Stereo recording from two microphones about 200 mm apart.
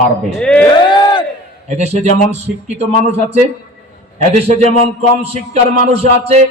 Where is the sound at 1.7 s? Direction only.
35° right (ahead or behind).